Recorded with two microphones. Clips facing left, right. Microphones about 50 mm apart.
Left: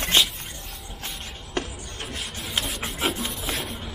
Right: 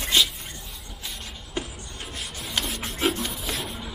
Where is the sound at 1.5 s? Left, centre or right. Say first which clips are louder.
Left 3 dB; left.